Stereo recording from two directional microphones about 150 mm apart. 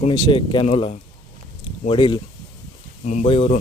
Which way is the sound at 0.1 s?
30° left (ahead or behind).